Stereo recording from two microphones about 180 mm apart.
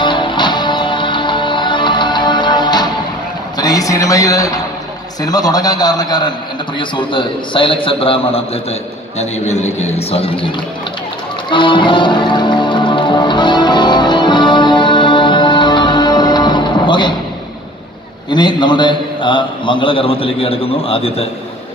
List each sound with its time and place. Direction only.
0.0 s music: 25° left (ahead or behind)
3.5 s a man's voice: 20° left (ahead or behind)
11.5 s music: 25° left (ahead or behind)
18.3 s a man's voice: 25° left (ahead or behind)